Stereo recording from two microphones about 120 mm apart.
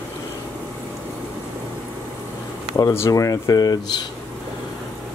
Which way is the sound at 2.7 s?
25° left (ahead or behind).